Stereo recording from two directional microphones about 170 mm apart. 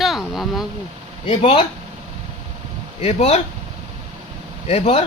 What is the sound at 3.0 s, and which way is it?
Speech, 40° left (ahead or behind).